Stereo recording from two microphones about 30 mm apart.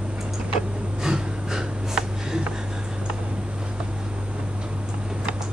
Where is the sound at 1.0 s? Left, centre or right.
Centre.